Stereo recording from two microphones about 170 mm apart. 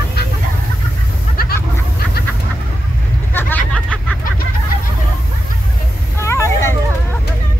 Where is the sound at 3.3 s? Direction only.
10° left (ahead or behind).